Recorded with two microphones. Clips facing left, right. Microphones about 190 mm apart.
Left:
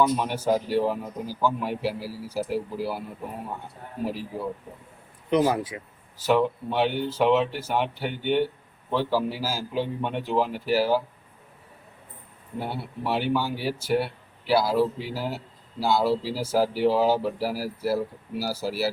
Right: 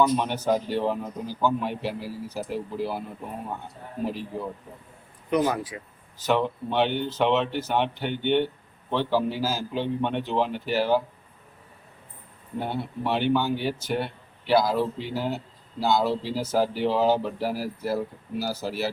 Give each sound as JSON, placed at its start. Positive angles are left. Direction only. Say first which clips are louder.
{"t": 0.2, "sound": "speech", "louder": "even", "side_deg": 5}
{"t": 4.0, "sound": "speech", "louder": "even", "side_deg": 5}
{"t": 5.7, "sound": "speech", "louder": "left 1 dB", "side_deg": 25}
{"t": 6.1, "sound": "speech", "louder": "left 2 dB", "side_deg": 10}
{"t": 12.5, "sound": "speech", "louder": "right 2 dB", "side_deg": 5}